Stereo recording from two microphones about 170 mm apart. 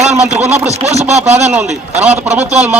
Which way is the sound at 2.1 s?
40° right (ahead or behind).